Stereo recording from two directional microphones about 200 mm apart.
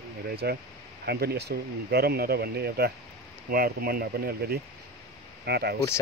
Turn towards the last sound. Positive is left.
turn(degrees=-55)  # may be behind; listen again after turning